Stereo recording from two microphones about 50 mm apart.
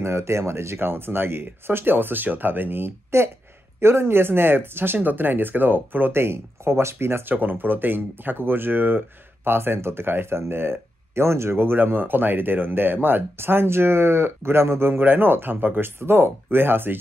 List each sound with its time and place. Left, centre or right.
0.0 s speech: right
3.1 s speech: right
7.3 s speech: right
16.0 s speech: right